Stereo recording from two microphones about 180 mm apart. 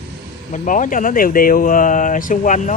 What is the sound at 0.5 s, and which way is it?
Speech, 45° left (ahead or behind).